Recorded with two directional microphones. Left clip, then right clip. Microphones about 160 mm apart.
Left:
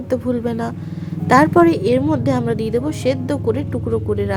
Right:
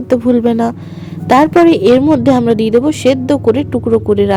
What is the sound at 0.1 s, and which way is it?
A woman's voice, 40° right (ahead or behind).